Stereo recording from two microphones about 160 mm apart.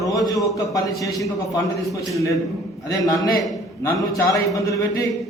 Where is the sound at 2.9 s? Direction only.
20° left (ahead or behind).